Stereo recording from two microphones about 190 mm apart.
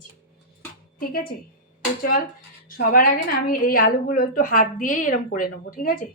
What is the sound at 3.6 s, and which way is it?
A woman's voice, 50° left (ahead or behind).